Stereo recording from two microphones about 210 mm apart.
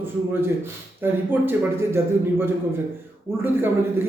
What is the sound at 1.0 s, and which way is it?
A man's voice, 10° right (ahead or behind).